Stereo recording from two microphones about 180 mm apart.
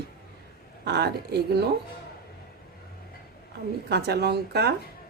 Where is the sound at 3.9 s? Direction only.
65° right (ahead or behind).